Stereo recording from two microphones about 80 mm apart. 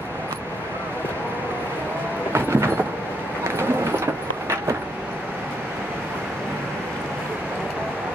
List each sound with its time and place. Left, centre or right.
2.3 s train: right
3.4 s vehicle: right